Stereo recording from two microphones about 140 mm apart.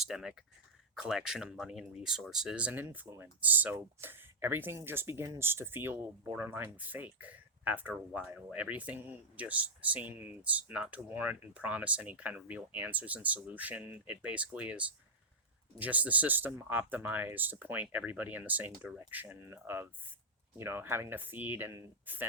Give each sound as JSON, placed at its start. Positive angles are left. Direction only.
{"t": 0.0, "sound": "speech", "side_deg": -5}